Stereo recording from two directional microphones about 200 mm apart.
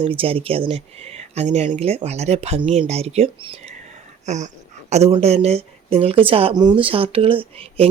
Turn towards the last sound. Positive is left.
turn(degrees=-25)  # may be behind; listen again after turning